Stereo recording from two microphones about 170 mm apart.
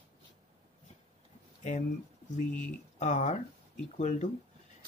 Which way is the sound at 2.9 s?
45° left (ahead or behind).